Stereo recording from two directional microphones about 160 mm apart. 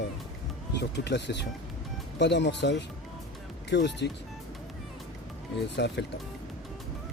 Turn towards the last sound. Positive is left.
turn(degrees=90)